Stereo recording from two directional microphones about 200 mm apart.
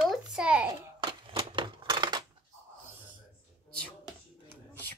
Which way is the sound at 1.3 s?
25° right (ahead or behind).